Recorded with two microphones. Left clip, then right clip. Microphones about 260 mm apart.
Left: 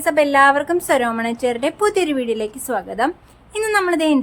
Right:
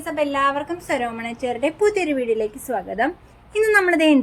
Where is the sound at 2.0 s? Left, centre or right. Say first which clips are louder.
Even; centre.